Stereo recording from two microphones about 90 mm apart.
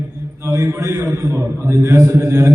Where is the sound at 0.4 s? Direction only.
35° right (ahead or behind).